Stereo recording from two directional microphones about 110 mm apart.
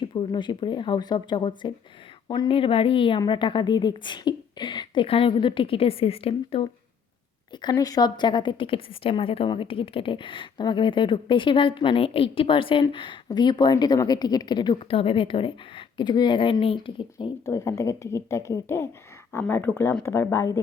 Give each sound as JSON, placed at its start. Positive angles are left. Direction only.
{"t": 0.0, "sound": "speech", "side_deg": 45}
{"t": 5.0, "sound": "a woman's voice", "side_deg": 55}
{"t": 7.6, "sound": "a woman's voice", "side_deg": 35}
{"t": 14.8, "sound": "a woman's voice", "side_deg": 55}
{"t": 16.0, "sound": "speech", "side_deg": 40}
{"t": 17.4, "sound": "a woman's voice", "side_deg": 30}